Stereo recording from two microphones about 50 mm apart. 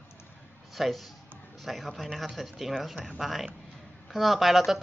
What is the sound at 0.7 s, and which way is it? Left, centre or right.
Speech, centre.